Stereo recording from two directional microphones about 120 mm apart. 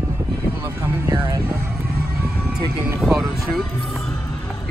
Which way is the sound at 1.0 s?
25° right (ahead or behind).